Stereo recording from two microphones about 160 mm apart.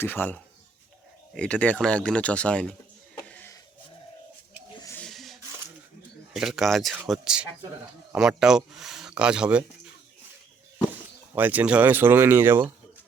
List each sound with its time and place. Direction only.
0.0 s speech: 10° left (ahead or behind)
3.2 s vehicle: 10° left (ahead or behind)
4.9 s a sound: centre (ahead or behind)
6.3 s speech: centre (ahead or behind)
11.3 s speech: 10° right (ahead or behind)